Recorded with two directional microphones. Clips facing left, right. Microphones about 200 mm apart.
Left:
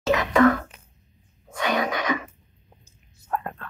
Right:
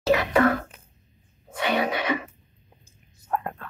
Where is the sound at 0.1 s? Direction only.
30° right (ahead or behind).